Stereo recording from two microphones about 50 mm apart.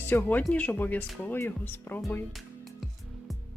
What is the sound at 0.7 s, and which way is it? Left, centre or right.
Speech, left.